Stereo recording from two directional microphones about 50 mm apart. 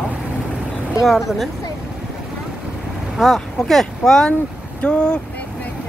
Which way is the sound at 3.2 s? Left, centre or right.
Centre.